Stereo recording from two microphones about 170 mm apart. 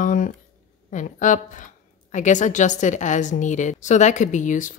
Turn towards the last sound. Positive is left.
turn(degrees=50)  # may be behind; listen again after turning